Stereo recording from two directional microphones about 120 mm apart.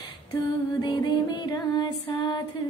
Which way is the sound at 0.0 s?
30° left (ahead or behind).